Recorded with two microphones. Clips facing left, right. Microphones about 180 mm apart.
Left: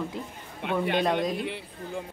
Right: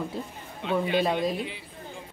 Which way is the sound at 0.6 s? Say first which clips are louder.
Even; 60° left (ahead or behind).